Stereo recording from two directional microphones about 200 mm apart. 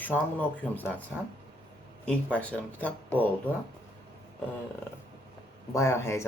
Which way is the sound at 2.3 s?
10° left (ahead or behind).